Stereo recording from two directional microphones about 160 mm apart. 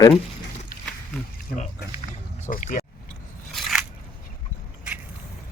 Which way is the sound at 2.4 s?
55° left (ahead or behind).